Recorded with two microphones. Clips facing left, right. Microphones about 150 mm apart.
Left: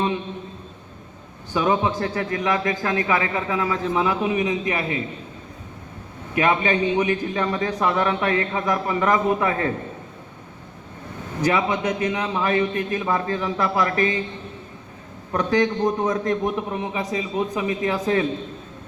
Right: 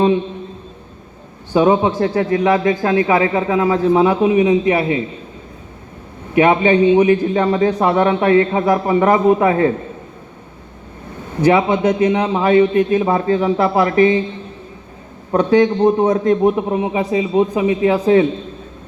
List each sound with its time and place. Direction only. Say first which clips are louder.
1.5 s a man's voice: right 8 dB; 25° right (ahead or behind)
6.3 s a man's voice: right 8 dB; 25° right (ahead or behind)
11.4 s a man's voice: right 8 dB; 30° right (ahead or behind)
15.3 s a man's voice: right 8 dB; 30° right (ahead or behind)
16.7 s a man's voice: right 9 dB; 25° right (ahead or behind)